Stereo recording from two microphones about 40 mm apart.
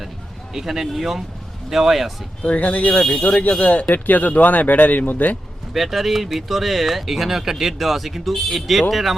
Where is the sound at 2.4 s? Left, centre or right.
Left.